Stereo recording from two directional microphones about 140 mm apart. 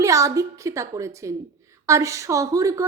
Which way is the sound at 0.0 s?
20° right (ahead or behind).